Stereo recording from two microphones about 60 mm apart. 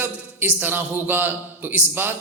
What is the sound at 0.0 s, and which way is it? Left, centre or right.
A man's voice, right.